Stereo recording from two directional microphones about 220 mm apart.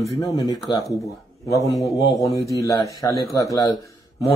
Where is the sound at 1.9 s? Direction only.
Centre (ahead or behind).